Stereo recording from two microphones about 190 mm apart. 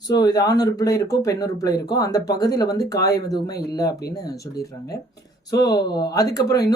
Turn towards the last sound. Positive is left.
turn(degrees=20)  # may be behind; listen again after turning